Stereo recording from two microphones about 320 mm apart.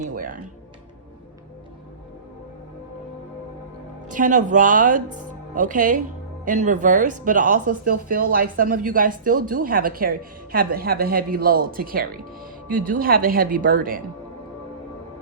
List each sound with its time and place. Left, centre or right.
0.0 s speech: right
4.1 s speech: right